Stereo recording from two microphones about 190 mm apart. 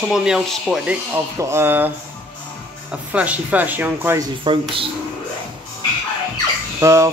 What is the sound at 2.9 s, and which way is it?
Speech, 5° right (ahead or behind).